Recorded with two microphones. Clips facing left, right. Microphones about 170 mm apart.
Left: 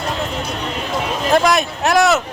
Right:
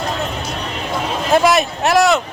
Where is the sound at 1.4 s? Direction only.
Centre (ahead or behind).